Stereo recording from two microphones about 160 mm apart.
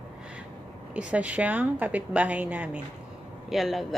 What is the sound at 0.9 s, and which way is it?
A woman's voice, 10° right (ahead or behind).